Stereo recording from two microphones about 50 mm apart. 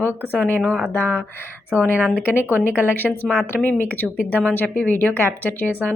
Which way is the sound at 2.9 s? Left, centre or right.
Left.